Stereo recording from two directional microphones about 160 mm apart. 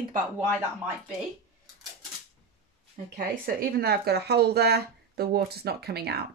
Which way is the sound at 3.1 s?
85° right.